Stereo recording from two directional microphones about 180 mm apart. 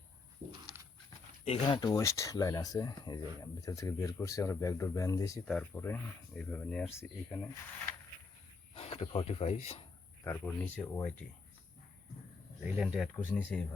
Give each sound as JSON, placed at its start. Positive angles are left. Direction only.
{"t": 1.5, "sound": "speech", "side_deg": 25}
{"t": 8.7, "sound": "speech", "side_deg": 35}
{"t": 10.2, "sound": "speech", "side_deg": 10}
{"t": 12.6, "sound": "speech", "side_deg": -5}